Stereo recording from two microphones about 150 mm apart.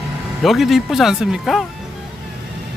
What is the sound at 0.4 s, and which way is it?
Speech, centre (ahead or behind).